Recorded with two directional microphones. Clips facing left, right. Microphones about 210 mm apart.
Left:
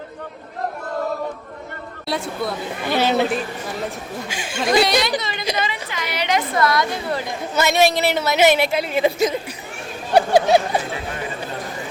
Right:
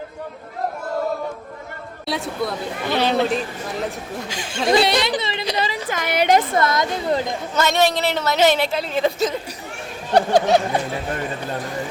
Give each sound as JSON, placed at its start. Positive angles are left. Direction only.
{"t": 2.0, "sound": "speech", "side_deg": 0}
{"t": 4.7, "sound": "a woman's voice", "side_deg": -25}
{"t": 5.2, "sound": "a sound", "side_deg": -30}
{"t": 5.5, "sound": "a woman's voice", "side_deg": -35}
{"t": 6.5, "sound": "a woman's voice", "side_deg": -25}
{"t": 7.5, "sound": "a woman's voice", "side_deg": 10}
{"t": 10.1, "sound": "a sound", "side_deg": 10}